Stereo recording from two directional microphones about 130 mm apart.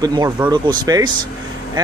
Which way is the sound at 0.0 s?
30° right (ahead or behind).